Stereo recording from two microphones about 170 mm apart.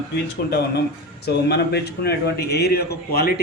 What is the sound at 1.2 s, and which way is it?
A man's voice, 75° left (ahead or behind).